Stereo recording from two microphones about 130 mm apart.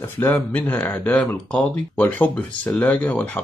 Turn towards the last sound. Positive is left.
turn(degrees=10)  # may be behind; listen again after turning